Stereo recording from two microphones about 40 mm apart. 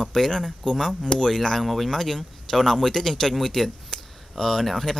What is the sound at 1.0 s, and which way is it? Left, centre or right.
Speech, centre.